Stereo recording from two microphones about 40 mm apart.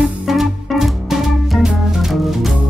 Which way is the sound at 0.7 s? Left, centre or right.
Centre.